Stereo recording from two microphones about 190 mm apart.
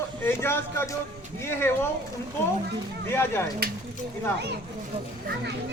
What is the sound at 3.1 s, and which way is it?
Speech, 10° left (ahead or behind).